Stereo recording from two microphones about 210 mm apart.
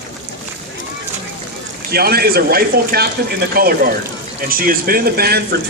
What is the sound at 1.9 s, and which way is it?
Speech, 45° right (ahead or behind).